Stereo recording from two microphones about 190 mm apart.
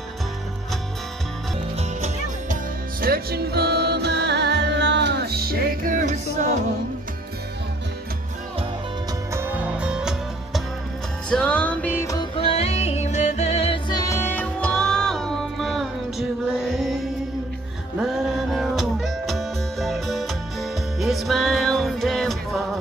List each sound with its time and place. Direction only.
1.8 s music: 35° right (ahead or behind)
3.0 s music: 55° right (ahead or behind)
9.3 s music: 10° right (ahead or behind); by 12.3 s 15° left (ahead or behind)
12.4 s music: 30° left (ahead or behind); by 22.6 s centre (ahead or behind)